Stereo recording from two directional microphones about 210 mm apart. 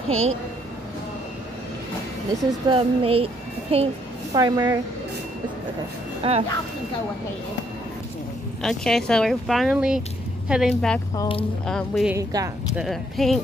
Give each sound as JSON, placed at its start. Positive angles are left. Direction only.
{"t": 0.1, "sound": "speech", "side_deg": -75}
{"t": 2.7, "sound": "a child's voice", "side_deg": -25}
{"t": 6.2, "sound": "a child's voice", "side_deg": -25}
{"t": 8.6, "sound": "speech", "side_deg": 5}
{"t": 11.1, "sound": "speech", "side_deg": 25}
{"t": 11.6, "sound": "speech", "side_deg": 0}
{"t": 12.2, "sound": "speech", "side_deg": -15}
{"t": 12.7, "sound": "speech", "side_deg": 0}